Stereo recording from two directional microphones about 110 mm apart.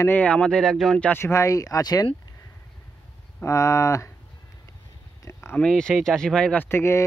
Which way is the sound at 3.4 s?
30° left (ahead or behind).